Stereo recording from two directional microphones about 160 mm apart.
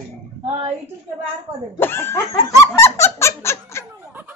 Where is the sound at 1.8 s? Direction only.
15° left (ahead or behind).